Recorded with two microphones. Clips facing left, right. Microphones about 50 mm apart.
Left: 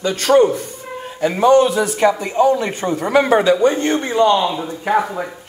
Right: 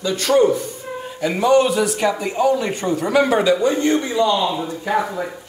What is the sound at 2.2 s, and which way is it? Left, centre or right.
A man's voice, left.